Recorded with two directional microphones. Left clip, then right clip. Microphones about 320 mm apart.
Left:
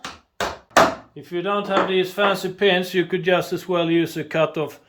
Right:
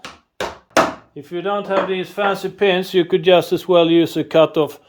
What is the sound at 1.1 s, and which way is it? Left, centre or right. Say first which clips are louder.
Speech: right 2 dB; centre.